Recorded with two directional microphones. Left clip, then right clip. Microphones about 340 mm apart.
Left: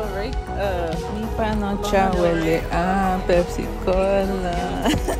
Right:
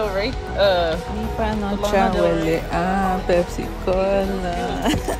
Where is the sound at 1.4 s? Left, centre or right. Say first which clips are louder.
Right 1 dB; centre.